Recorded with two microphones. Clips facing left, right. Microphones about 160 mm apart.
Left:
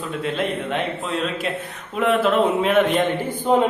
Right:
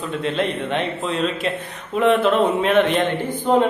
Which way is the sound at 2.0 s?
Centre (ahead or behind).